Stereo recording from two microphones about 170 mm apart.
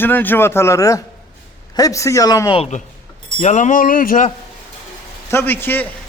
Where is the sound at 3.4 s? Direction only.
45° left (ahead or behind).